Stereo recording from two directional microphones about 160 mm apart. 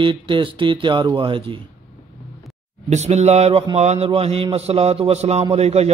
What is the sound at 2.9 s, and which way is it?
A man's voice, 45° right (ahead or behind).